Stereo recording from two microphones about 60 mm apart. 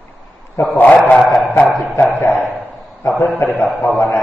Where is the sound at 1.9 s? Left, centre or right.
Left.